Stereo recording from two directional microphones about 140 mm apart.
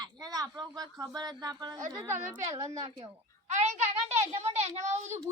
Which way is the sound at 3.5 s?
55° right (ahead or behind).